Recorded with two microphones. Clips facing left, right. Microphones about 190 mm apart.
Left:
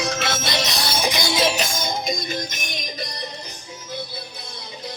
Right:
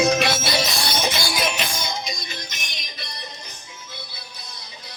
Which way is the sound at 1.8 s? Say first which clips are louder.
Left 5 dB; 50° left (ahead or behind).